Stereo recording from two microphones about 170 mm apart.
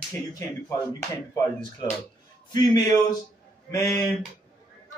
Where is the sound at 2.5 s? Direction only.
20° left (ahead or behind).